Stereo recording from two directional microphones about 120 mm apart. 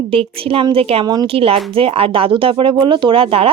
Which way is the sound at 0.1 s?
50° right (ahead or behind).